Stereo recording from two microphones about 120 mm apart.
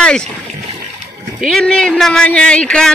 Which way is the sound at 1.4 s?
Centre (ahead or behind).